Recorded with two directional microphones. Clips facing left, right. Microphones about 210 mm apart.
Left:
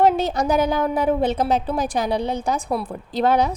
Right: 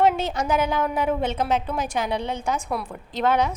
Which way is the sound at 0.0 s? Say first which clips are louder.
Left 3 dB; 35° left (ahead or behind).